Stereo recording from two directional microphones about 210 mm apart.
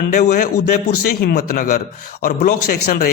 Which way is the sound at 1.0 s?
45° left (ahead or behind).